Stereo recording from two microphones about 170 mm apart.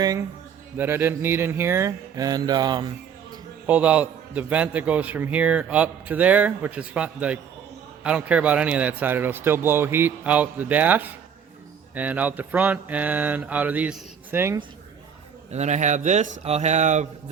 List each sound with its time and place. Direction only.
0.0 s a man's voice: 20° right (ahead or behind)
3.7 s a man's voice: 10° right (ahead or behind)
15.5 s speech: 40° right (ahead or behind)